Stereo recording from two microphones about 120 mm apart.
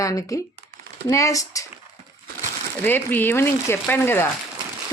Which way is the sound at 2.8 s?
15° left (ahead or behind).